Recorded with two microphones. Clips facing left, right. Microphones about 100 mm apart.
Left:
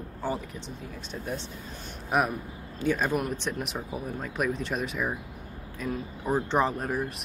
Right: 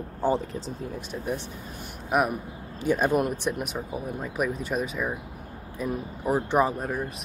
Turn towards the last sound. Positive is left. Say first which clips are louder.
# right 2 dB
turn(degrees=-10)  # may be behind; listen again after turning